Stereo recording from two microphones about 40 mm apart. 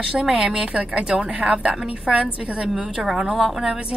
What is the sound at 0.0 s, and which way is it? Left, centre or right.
A woman's voice, centre.